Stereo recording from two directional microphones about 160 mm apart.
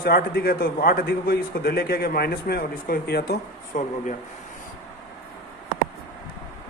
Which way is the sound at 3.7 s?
55° left (ahead or behind).